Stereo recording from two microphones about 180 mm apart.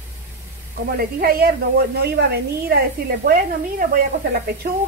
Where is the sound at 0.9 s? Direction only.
55° right (ahead or behind).